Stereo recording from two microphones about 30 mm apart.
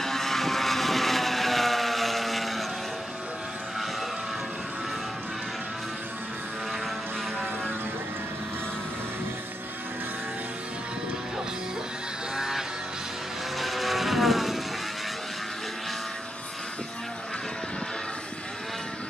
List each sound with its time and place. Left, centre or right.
0.0 s vehicle: centre
12.4 s music: centre
13.6 s vehicle: centre